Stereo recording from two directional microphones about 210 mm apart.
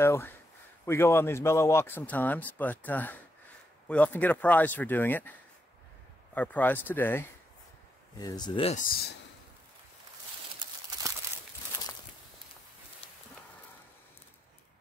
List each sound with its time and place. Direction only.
0.0 s speech: 10° left (ahead or behind)
6.3 s speech: 5° left (ahead or behind); by 8.8 s 25° left (ahead or behind)